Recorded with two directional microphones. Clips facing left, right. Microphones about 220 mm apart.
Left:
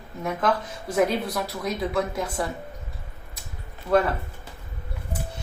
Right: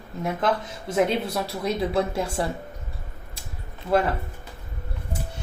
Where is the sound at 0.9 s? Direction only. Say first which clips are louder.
Even; 25° right (ahead or behind).